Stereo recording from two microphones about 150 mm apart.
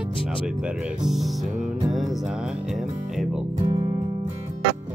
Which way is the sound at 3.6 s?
35° right (ahead or behind).